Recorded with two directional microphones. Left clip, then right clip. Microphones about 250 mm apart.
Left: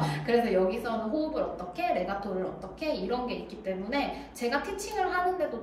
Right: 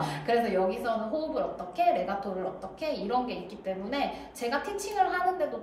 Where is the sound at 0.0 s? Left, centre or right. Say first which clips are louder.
Even; centre.